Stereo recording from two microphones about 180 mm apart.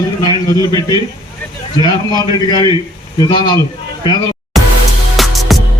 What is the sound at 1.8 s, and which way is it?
A man's voice, 20° left (ahead or behind).